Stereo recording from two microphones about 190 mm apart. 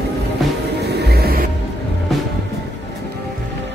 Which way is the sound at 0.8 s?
60° right (ahead or behind).